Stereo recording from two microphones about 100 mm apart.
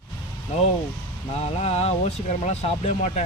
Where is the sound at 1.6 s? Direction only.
90° left.